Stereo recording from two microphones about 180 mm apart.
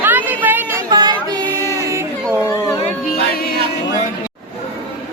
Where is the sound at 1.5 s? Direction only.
15° left (ahead or behind).